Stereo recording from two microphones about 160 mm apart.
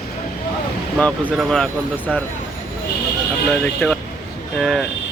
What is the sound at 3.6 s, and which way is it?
Speech, 5° left (ahead or behind).